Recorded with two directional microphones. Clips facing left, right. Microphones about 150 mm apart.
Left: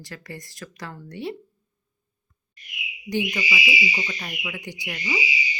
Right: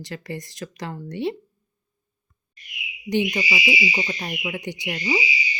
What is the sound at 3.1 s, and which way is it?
Speech, 25° right (ahead or behind).